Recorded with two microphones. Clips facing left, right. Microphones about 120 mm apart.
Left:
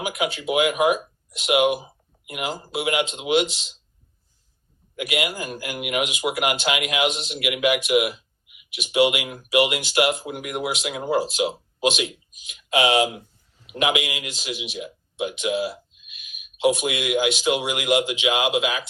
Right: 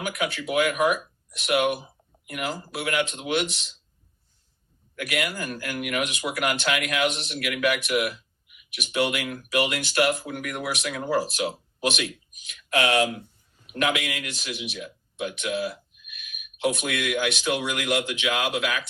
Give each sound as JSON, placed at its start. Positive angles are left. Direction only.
{"t": 0.0, "sound": "speech", "side_deg": 20}
{"t": 4.9, "sound": "speech", "side_deg": 20}
{"t": 16.1, "sound": "a sound", "side_deg": -60}
{"t": 16.8, "sound": "speech", "side_deg": 20}